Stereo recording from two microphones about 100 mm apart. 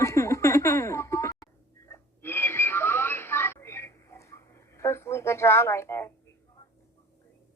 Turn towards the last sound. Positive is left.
turn(degrees=30)  # may be behind; listen again after turning